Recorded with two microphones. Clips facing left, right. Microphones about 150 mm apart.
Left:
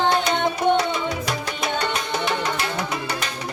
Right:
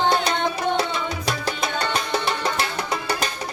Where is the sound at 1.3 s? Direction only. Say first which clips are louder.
Even; 35° right (ahead or behind).